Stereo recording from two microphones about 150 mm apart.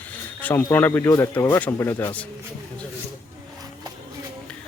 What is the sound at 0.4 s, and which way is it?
Speech, 10° left (ahead or behind).